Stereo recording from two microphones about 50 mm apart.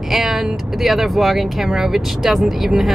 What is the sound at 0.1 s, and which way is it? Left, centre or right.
Vehicle, centre.